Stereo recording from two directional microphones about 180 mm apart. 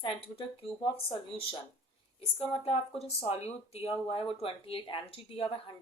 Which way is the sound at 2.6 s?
35° left (ahead or behind).